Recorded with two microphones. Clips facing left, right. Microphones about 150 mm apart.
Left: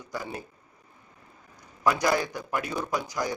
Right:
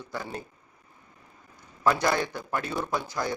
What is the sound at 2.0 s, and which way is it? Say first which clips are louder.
A man's voice: left 1 dB; 10° left (ahead or behind).